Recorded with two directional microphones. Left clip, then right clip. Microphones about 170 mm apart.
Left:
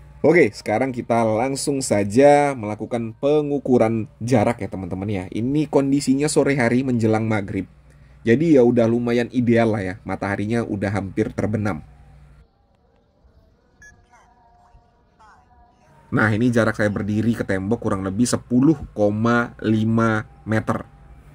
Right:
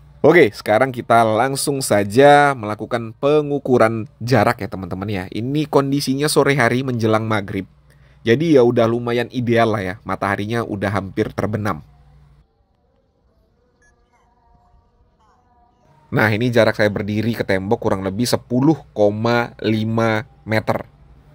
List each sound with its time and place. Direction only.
0.2 s speech: 30° right (ahead or behind)
13.7 s music: 15° left (ahead or behind)
16.1 s speech: 25° right (ahead or behind)